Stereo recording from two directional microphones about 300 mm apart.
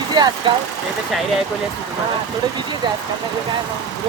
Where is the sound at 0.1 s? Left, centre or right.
Centre.